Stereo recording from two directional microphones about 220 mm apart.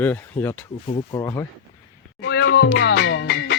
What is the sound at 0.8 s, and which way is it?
Speech, 25° left (ahead or behind).